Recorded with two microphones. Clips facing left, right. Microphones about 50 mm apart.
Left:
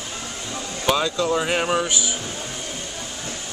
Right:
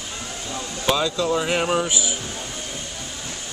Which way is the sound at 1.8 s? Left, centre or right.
Centre.